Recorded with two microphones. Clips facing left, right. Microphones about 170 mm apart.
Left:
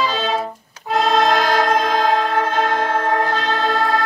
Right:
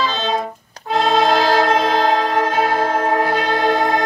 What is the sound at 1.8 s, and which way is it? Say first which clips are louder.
Music: right 1 dB; 35° right (ahead or behind).